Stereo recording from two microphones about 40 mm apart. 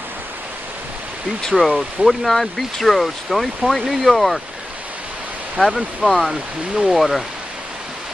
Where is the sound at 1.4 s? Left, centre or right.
Centre.